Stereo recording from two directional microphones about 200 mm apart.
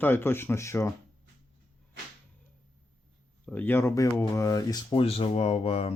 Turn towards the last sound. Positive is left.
turn(degrees=30)  # may be behind; listen again after turning